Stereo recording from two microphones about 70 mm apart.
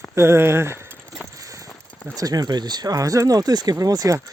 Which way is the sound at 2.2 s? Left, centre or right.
Right.